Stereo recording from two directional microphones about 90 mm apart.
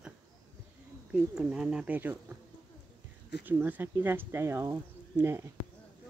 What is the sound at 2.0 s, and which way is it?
Speech, 20° right (ahead or behind).